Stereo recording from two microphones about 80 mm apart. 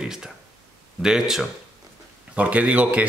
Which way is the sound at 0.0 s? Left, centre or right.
Centre.